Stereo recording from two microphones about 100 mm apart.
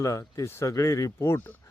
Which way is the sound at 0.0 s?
35° left (ahead or behind).